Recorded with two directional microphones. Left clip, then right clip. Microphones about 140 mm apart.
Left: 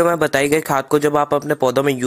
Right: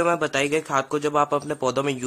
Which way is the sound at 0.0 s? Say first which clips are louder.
Left 6 dB; 40° left (ahead or behind).